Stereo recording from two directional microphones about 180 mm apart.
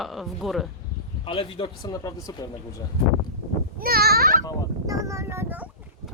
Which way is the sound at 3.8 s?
55° right (ahead or behind).